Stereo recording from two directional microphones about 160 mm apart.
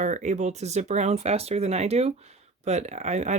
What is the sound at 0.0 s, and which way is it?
Speech, 50° right (ahead or behind).